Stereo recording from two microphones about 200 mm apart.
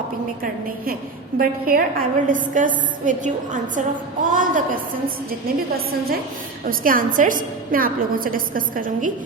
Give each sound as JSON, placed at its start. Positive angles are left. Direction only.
{"t": 1.4, "sound": "a woman's voice", "side_deg": -45}
{"t": 5.7, "sound": "a woman's voice", "side_deg": -50}